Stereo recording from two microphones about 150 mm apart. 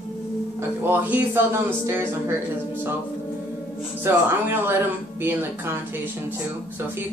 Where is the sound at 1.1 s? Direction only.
15° right (ahead or behind).